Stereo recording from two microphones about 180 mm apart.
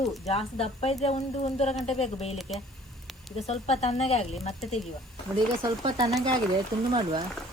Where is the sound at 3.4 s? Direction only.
35° left (ahead or behind).